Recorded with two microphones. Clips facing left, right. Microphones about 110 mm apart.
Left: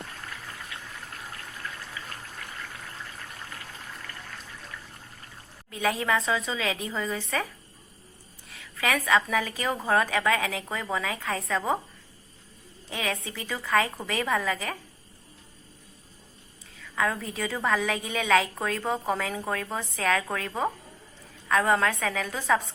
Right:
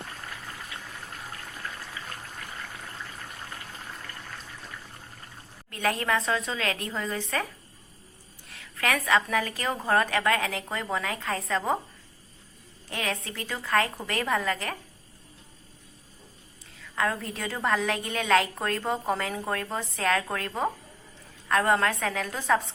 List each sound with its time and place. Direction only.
5.7 s a woman's voice: 5° left (ahead or behind)
8.4 s a woman's voice: centre (ahead or behind)
12.9 s a woman's voice: centre (ahead or behind)
16.7 s a woman's voice: centre (ahead or behind)